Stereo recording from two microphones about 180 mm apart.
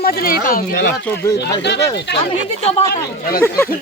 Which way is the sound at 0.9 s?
10° left (ahead or behind).